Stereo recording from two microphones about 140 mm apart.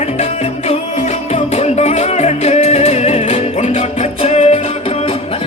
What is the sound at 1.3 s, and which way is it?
Music, 50° left (ahead or behind).